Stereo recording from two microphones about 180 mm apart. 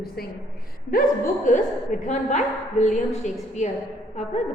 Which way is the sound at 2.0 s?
40° left (ahead or behind).